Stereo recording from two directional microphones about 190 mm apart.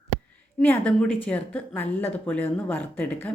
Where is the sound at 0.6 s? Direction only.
10° left (ahead or behind).